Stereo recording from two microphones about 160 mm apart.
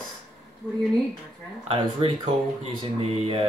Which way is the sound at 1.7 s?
35° right (ahead or behind).